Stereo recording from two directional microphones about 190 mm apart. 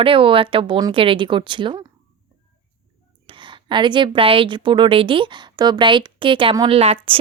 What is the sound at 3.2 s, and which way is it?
A woman's voice, 25° right (ahead or behind).